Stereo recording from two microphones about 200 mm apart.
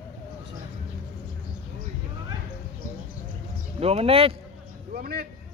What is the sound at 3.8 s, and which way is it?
Speech, 30° right (ahead or behind).